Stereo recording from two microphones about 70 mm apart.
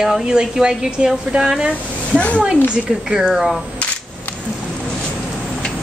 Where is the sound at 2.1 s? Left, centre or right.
Centre.